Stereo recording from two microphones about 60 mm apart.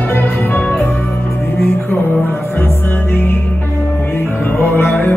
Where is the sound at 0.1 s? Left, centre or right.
Left.